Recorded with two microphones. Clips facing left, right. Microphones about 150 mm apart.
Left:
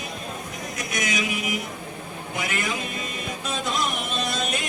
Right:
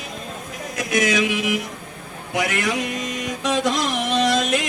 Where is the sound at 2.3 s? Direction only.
80° right.